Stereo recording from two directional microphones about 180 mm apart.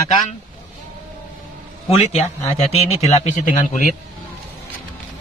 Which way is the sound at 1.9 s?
35° left (ahead or behind).